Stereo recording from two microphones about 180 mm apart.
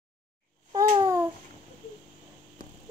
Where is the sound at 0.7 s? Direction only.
15° right (ahead or behind).